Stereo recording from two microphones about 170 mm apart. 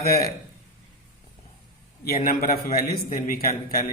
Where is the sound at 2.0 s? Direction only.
65° left (ahead or behind).